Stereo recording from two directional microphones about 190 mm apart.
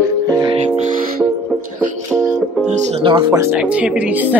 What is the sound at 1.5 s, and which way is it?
Music, centre (ahead or behind).